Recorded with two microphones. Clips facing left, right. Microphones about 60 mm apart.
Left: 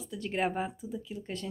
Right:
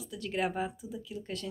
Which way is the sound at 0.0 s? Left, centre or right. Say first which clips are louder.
Left 1 dB; left.